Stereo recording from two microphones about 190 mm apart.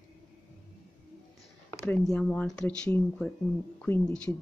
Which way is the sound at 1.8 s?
5° left (ahead or behind).